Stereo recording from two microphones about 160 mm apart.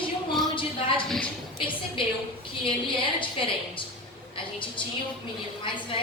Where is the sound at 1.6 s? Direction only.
30° left (ahead or behind).